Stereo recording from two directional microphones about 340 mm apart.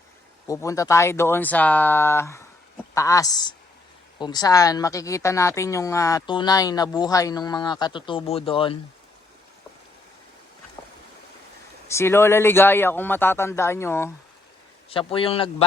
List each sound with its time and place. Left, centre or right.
0.4 s speech: centre
11.9 s speech: centre